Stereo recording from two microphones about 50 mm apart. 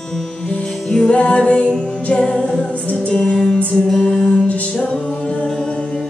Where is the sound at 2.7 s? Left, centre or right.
Left; by 4.3 s centre.